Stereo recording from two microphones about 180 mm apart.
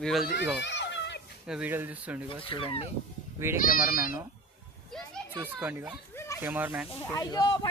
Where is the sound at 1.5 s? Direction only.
5° right (ahead or behind).